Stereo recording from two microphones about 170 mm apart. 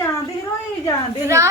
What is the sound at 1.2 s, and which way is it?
Speech, 15° right (ahead or behind).